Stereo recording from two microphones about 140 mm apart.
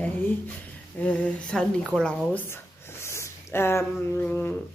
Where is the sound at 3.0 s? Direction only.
20° left (ahead or behind).